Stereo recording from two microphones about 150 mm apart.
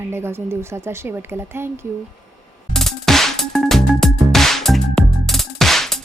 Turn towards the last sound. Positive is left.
turn(degrees=0)  # may be behind; listen again after turning